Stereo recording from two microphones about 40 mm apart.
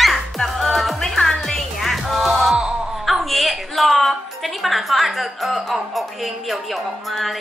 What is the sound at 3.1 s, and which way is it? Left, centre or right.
A woman's voice, centre.